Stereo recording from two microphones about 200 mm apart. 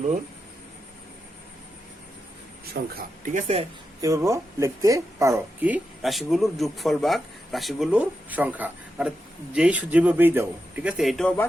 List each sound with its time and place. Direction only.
2.9 s speech: 40° right (ahead or behind)
4.0 s speech: 15° right (ahead or behind); by 11.4 s 5° left (ahead or behind)